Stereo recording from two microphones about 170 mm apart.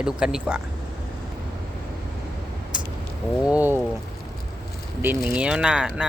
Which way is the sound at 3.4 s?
10° right (ahead or behind).